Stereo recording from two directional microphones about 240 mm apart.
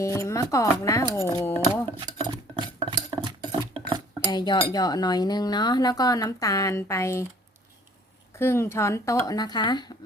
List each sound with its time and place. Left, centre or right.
0.0 s speech: centre
2.6 s dishes: centre
4.3 s speech: centre
8.4 s speech: centre